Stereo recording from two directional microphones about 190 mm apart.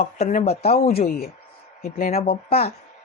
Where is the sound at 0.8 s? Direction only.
50° left (ahead or behind).